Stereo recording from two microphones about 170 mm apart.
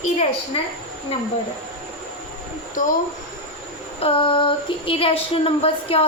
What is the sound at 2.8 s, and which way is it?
Speech, 50° left (ahead or behind).